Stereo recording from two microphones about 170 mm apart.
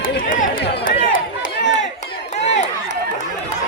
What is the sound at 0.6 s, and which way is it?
Run, 75° left (ahead or behind).